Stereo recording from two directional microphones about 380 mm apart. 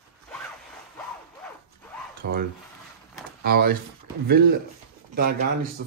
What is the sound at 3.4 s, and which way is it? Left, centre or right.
Speech, right.